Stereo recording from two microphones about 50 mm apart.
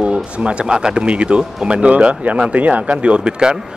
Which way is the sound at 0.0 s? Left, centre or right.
Right.